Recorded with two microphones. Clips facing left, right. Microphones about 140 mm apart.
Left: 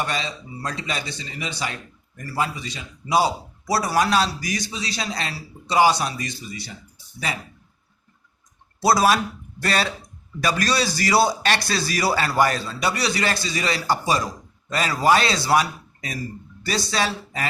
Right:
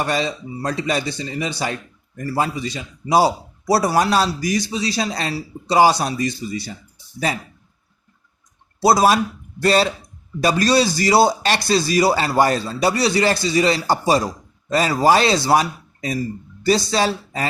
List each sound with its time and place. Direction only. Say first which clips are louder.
0.0 s a man's voice: right 6 dB; 40° right (ahead or behind)
8.8 s a man's voice: right 3 dB; 25° right (ahead or behind)